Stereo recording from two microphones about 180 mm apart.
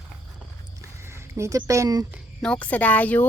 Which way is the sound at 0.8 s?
15° right (ahead or behind).